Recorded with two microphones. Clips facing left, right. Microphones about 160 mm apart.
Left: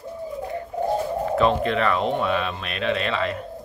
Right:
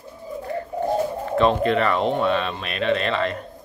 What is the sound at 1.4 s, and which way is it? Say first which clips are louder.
Speech: right 3 dB; centre (ahead or behind).